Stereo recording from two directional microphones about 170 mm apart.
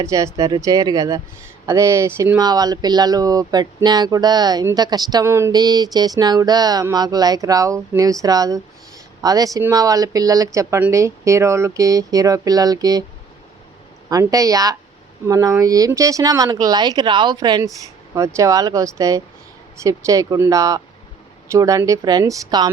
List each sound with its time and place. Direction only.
0.0 s speech: 20° right (ahead or behind)
14.1 s speech: 20° right (ahead or behind)